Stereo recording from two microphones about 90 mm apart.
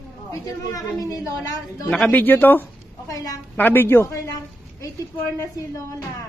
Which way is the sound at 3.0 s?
40° left (ahead or behind).